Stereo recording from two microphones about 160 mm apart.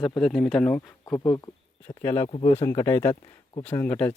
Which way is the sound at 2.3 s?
35° left (ahead or behind).